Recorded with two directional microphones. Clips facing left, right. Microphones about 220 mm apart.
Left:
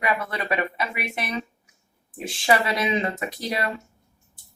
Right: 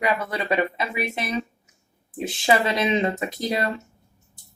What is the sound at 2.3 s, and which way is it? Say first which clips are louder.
Speech: right 1 dB; 25° right (ahead or behind).